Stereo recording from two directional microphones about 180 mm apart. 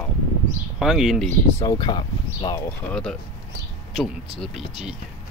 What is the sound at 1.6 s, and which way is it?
Speech, 20° left (ahead or behind).